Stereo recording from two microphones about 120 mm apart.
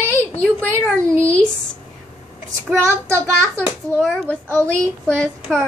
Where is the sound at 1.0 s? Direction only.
25° right (ahead or behind).